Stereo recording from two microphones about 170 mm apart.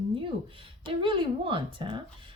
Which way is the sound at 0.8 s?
30° right (ahead or behind).